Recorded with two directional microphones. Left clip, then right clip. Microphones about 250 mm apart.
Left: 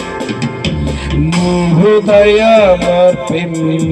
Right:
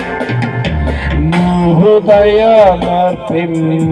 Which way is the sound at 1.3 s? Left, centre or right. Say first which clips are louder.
Right 2 dB; left.